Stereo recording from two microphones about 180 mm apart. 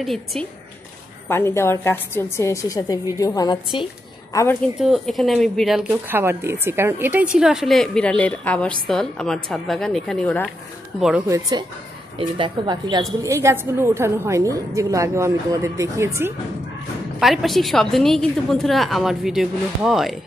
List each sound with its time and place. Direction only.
0.0 s a woman's voice: centre (ahead or behind)
1.3 s a woman's voice: 15° left (ahead or behind)
4.7 s a woman's voice: centre (ahead or behind)
11.0 s a woman's voice: 5° right (ahead or behind)
11.2 s a woman's voice: 20° right (ahead or behind)
17.2 s a woman's voice: centre (ahead or behind)